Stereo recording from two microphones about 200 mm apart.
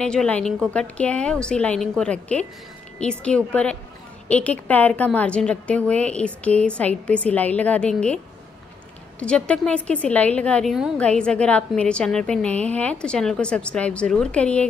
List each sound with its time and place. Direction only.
0.0 s a woman's voice: 5° left (ahead or behind)
9.2 s a woman's voice: 5° left (ahead or behind)